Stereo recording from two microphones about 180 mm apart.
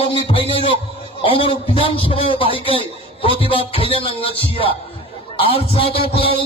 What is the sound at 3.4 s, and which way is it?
Music, 30° left (ahead or behind).